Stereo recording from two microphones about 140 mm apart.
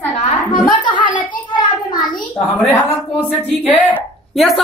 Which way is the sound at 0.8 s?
35° left (ahead or behind).